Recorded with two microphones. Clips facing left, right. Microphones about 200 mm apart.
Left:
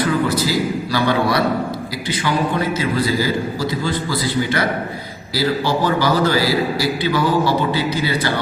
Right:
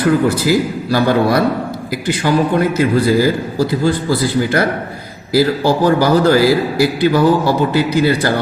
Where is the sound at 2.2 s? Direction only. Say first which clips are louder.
Right 6 dB; 45° right (ahead or behind).